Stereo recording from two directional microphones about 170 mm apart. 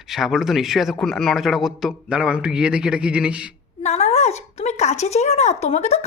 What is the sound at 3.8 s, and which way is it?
Speech, 40° left (ahead or behind).